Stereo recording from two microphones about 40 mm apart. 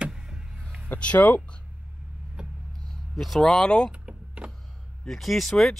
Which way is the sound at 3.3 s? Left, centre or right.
Centre.